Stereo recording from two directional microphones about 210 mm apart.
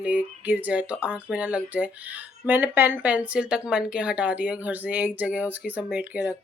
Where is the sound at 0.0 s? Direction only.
5° right (ahead or behind).